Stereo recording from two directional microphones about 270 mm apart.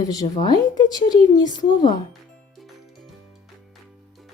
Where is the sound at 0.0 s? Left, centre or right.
Centre.